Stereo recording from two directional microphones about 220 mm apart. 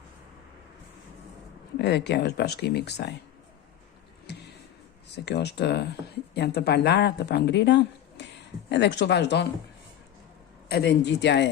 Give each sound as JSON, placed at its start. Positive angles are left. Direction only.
{"t": 1.8, "sound": "speech", "side_deg": 50}
{"t": 5.1, "sound": "speech", "side_deg": 50}
{"t": 10.7, "sound": "speech", "side_deg": 45}